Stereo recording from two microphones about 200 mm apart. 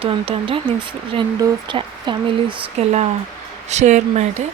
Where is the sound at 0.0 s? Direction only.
25° right (ahead or behind).